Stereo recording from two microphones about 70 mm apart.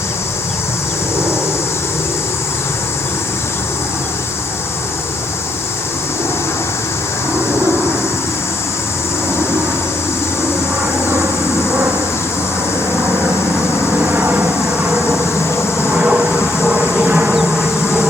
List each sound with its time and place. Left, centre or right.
14.0 s vehicle: right
16.0 s train: centre
17.2 s insect: centre